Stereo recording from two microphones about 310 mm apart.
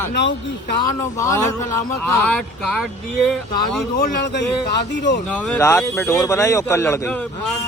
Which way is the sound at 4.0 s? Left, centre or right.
Left.